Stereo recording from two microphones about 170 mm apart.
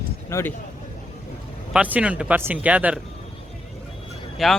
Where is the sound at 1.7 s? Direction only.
10° right (ahead or behind).